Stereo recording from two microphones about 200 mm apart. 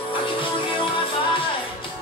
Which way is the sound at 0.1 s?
25° left (ahead or behind).